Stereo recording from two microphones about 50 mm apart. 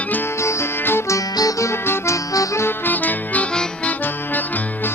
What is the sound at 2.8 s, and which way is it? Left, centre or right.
Music, left.